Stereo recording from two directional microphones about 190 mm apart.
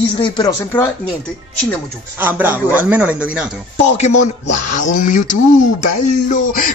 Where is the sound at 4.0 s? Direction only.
40° left (ahead or behind).